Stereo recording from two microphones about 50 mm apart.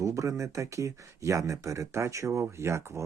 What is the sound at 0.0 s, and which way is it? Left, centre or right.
Speech, right.